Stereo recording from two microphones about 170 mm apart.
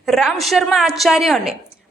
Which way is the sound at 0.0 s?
Centre (ahead or behind).